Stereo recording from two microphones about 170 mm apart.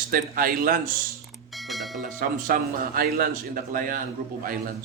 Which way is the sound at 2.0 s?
55° right (ahead or behind).